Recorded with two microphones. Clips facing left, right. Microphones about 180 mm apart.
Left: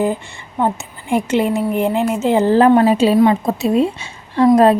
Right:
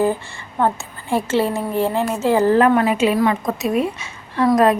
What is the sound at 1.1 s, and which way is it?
A woman's voice, 15° left (ahead or behind).